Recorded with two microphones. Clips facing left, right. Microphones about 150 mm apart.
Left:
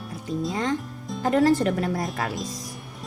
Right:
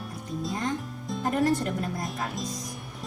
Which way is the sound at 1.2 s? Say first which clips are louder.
Left 6 dB; 90° left.